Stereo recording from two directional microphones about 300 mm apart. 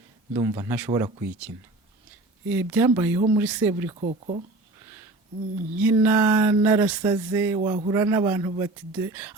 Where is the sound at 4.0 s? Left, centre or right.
Right.